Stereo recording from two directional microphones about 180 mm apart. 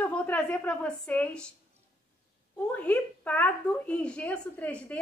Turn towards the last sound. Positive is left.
turn(degrees=10)  # may be behind; listen again after turning